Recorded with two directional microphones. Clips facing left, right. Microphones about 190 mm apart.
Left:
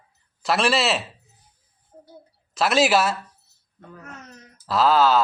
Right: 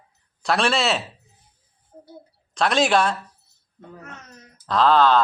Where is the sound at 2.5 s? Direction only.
5° left (ahead or behind).